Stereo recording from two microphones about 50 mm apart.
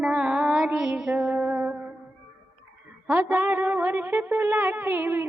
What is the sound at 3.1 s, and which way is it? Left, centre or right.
Music, right.